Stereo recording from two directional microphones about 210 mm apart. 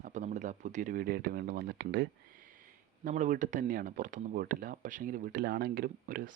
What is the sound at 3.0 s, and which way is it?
Speech, 35° right (ahead or behind).